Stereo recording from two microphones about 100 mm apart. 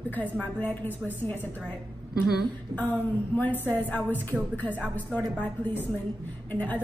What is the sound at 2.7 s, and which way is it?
A woman's voice, 20° left (ahead or behind).